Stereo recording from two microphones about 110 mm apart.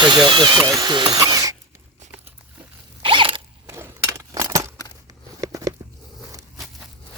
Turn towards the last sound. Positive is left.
turn(degrees=-30)  # may be behind; listen again after turning